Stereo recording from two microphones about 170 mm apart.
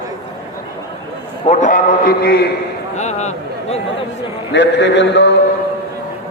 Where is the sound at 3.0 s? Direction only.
40° left (ahead or behind).